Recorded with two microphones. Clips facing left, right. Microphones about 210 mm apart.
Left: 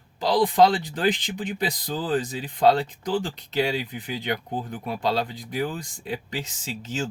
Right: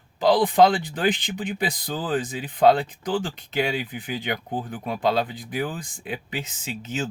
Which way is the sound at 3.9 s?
Centre (ahead or behind).